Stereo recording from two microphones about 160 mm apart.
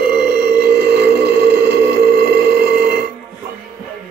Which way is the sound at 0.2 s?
75° right (ahead or behind).